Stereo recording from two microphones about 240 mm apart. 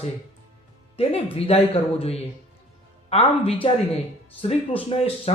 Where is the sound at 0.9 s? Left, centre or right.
Left.